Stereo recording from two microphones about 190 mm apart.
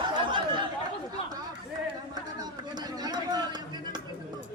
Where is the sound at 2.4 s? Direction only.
20° right (ahead or behind).